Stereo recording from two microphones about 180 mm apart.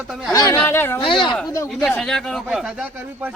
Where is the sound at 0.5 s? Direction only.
10° left (ahead or behind).